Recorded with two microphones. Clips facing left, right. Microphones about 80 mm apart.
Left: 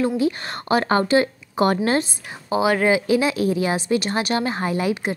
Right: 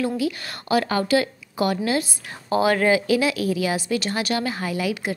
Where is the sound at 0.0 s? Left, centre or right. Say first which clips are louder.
Left 3 dB; left.